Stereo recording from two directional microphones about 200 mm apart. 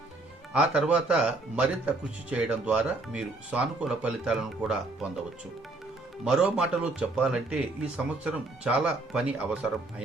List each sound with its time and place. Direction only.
0.9 s a man's voice: 5° right (ahead or behind)
6.2 s a man's voice: 5° right (ahead or behind)